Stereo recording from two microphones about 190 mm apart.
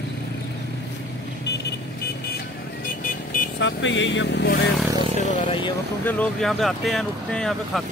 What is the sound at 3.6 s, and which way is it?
Speech, 75° left (ahead or behind).